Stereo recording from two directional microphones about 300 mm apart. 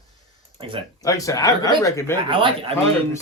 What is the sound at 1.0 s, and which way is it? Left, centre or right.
Speech, centre.